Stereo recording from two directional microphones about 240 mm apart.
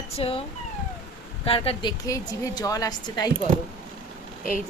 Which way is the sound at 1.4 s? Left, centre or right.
Left.